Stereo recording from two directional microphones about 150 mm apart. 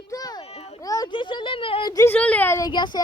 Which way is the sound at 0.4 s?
45° left (ahead or behind).